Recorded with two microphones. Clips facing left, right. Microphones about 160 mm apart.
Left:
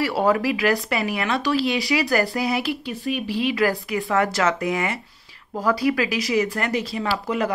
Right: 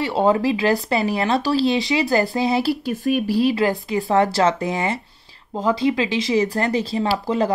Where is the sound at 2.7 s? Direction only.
45° right (ahead or behind).